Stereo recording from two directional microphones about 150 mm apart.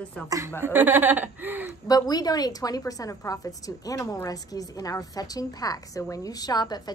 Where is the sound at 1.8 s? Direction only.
25° left (ahead or behind).